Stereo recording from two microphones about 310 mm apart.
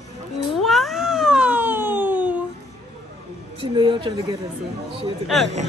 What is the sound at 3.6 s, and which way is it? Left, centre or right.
Speech, centre.